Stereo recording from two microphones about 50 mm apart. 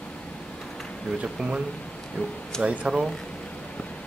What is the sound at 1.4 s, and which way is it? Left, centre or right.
Speech, centre.